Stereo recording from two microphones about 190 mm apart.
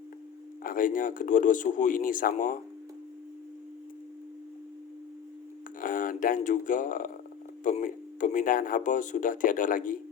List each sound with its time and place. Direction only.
0.6 s speech: 45° left (ahead or behind)
5.8 s speech: 45° left (ahead or behind)